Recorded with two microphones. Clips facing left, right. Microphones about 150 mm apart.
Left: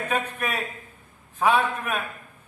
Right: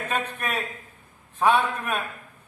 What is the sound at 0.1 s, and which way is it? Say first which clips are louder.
A man's voice: even; 5° left (ahead or behind).